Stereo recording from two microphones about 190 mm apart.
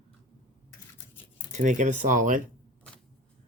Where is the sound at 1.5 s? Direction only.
40° right (ahead or behind).